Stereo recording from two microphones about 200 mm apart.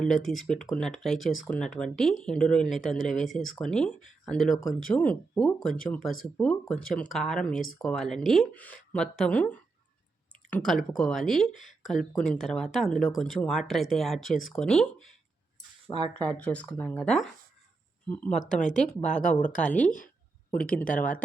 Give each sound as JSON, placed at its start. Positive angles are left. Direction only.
{"t": 0.0, "sound": "speech", "side_deg": 0}
{"t": 16.0, "sound": "speech", "side_deg": -20}
{"t": 16.4, "sound": "speech", "side_deg": 5}
{"t": 18.6, "sound": "speech", "side_deg": 40}